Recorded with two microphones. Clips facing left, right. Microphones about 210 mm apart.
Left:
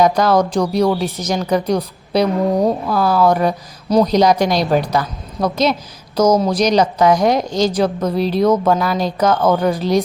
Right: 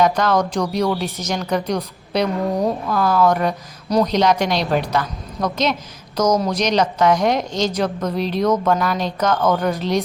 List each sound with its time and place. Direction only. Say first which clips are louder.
0.0 s a woman's voice: left 3 dB; 35° left (ahead or behind)
0.9 s speech: left 4 dB; centre (ahead or behind)
1.2 s a woman's voice: left 4 dB; 35° left (ahead or behind)